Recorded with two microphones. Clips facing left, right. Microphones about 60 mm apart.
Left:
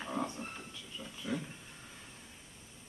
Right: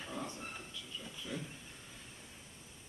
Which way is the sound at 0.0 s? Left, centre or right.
Left.